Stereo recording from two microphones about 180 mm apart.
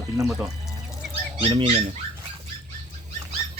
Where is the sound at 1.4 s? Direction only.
30° right (ahead or behind).